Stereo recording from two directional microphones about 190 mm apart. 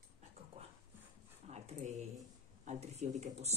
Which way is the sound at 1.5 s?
35° right (ahead or behind).